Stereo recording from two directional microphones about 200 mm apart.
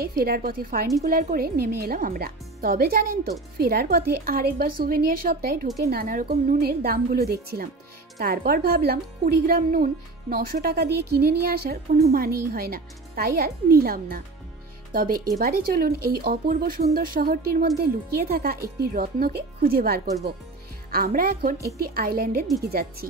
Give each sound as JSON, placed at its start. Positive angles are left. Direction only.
{"t": 0.0, "sound": "speech", "side_deg": -50}